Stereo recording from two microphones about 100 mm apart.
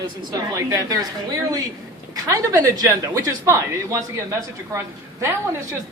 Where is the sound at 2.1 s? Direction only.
35° right (ahead or behind).